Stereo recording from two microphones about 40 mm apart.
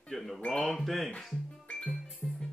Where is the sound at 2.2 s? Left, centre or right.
Left.